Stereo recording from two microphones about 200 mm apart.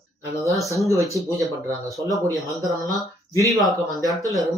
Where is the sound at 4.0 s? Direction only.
20° right (ahead or behind).